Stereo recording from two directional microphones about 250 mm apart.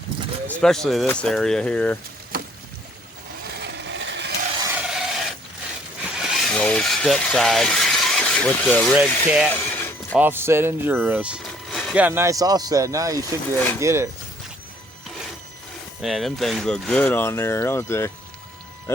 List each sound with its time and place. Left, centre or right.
0.4 s speech: centre
3.6 s vehicle: right
4.6 s a sound: centre
6.1 s vehicle: centre
9.0 s speech: centre
9.5 s a sound: centre
10.2 s speech: centre
16.0 s speech: centre